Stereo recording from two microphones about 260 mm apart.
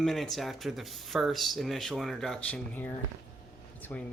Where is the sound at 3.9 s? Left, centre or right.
Centre.